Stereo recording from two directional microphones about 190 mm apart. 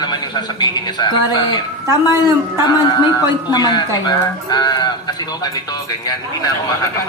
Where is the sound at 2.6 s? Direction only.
20° left (ahead or behind).